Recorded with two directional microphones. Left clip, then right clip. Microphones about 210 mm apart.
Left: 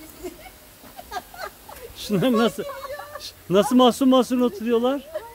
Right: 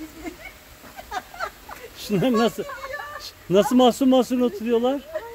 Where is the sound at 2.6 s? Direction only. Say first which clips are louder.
Even; 50° left (ahead or behind).